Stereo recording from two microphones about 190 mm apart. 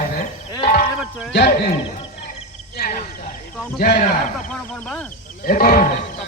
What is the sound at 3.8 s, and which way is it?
Speech, 45° left (ahead or behind).